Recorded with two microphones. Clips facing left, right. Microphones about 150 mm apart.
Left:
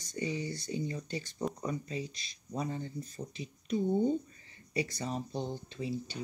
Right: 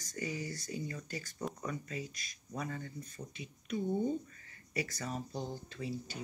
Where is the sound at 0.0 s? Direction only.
25° left (ahead or behind).